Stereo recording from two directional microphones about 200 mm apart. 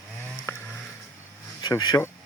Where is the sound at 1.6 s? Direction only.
20° left (ahead or behind).